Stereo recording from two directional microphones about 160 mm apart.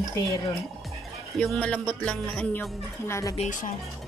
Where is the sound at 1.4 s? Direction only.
5° left (ahead or behind).